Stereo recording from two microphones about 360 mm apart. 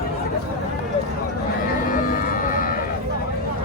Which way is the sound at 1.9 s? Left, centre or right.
Left.